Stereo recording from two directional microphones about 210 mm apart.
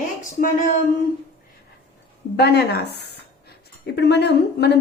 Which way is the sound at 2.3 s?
50° left (ahead or behind).